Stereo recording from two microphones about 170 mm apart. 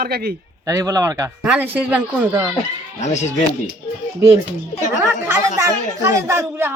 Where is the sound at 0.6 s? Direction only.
20° right (ahead or behind).